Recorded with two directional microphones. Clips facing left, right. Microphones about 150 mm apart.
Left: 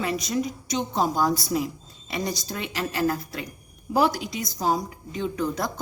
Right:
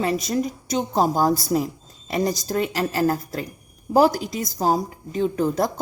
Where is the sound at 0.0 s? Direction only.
40° right (ahead or behind).